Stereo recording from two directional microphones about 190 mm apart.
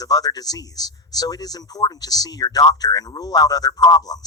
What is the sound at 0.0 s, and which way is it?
A man's voice, 20° left (ahead or behind).